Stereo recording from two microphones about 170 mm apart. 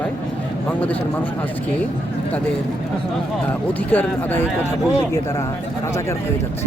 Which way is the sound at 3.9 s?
10° left (ahead or behind).